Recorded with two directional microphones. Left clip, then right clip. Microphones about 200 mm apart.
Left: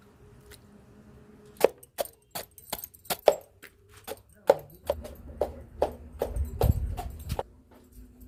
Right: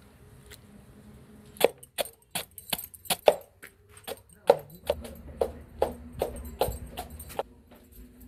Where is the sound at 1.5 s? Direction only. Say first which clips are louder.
Even; centre (ahead or behind).